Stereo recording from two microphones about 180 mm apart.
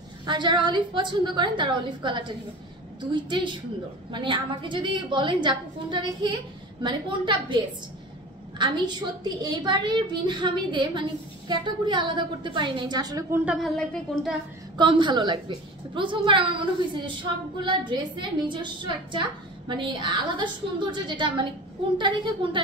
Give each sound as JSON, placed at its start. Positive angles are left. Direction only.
{"t": 0.3, "sound": "a woman's voice", "side_deg": -25}
{"t": 13.5, "sound": "speech", "side_deg": 0}
{"t": 14.8, "sound": "a woman's voice", "side_deg": -25}